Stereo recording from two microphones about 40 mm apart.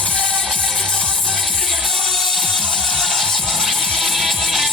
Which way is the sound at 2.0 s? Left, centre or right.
Centre.